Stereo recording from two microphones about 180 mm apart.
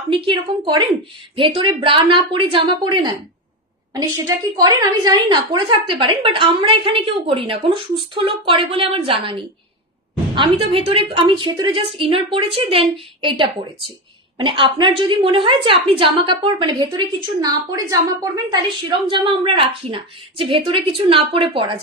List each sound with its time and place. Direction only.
0.2 s a woman's voice: 30° right (ahead or behind)